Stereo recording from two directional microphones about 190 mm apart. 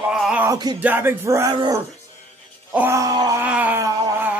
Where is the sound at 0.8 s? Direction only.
10° right (ahead or behind).